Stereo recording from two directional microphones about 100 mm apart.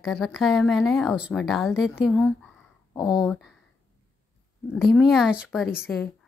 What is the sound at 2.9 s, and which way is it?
Speech, 45° left (ahead or behind).